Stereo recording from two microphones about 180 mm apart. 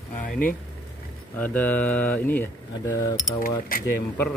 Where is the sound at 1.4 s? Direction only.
10° left (ahead or behind).